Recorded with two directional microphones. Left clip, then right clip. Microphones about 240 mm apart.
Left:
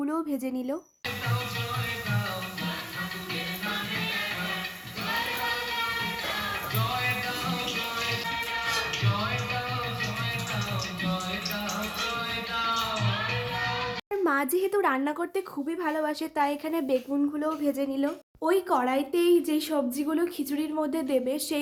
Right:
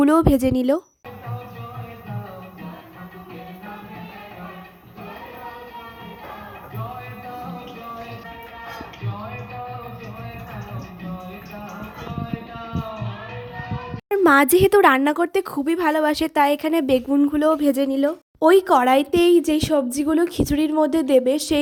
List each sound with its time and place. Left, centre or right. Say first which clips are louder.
0.0 s speech: right 14 dB; right
14.1 s speech: right 12 dB; right